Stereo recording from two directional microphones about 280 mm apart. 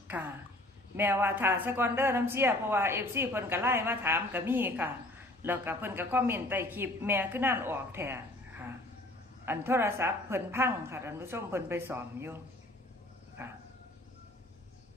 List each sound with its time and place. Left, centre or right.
0.9 s speech: centre
13.4 s speech: centre